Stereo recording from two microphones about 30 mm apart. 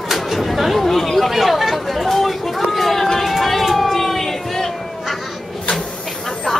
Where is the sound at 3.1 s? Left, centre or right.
Centre.